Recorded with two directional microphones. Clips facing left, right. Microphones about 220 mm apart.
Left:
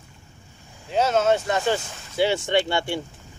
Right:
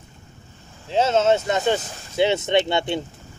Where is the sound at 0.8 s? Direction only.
25° right (ahead or behind).